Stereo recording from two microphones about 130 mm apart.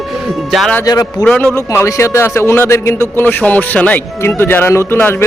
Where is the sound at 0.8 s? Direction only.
30° left (ahead or behind).